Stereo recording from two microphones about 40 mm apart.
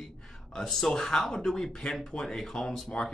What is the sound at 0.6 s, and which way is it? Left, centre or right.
Speech, centre.